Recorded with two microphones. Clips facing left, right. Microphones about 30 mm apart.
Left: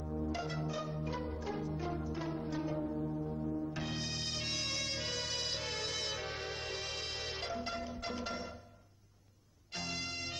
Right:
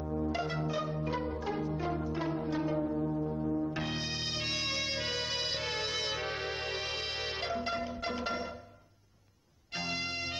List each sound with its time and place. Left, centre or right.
0.0 s music: right
9.8 s music: right